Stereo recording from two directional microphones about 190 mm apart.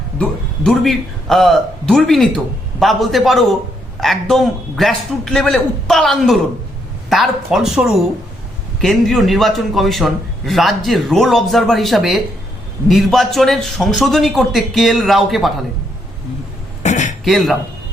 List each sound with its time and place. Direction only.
0.2 s a man's voice: 5° left (ahead or behind)
16.8 s a sound: 40° left (ahead or behind)
17.2 s a man's voice: centre (ahead or behind)